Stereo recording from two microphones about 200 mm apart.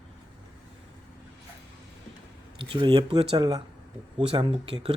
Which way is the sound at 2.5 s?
25° right (ahead or behind).